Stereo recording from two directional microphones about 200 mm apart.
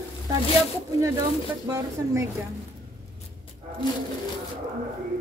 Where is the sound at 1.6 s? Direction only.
15° right (ahead or behind).